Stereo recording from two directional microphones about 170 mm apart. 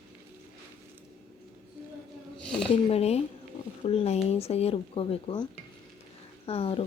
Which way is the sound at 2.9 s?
40° left (ahead or behind).